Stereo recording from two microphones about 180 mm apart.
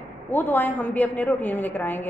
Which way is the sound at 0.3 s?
10° left (ahead or behind).